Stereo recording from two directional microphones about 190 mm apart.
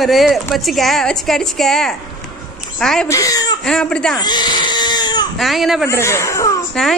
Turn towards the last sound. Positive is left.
turn(degrees=5)  # may be behind; listen again after turning